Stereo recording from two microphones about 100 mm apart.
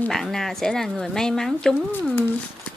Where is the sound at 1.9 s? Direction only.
20° left (ahead or behind).